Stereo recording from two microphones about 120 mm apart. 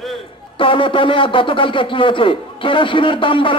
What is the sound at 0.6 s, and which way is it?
Speech, 45° left (ahead or behind).